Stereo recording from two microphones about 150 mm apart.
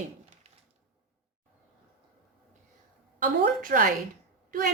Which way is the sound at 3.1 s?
65° right (ahead or behind).